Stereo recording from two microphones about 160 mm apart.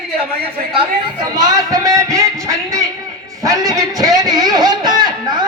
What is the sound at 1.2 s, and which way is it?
A man's voice, 25° right (ahead or behind).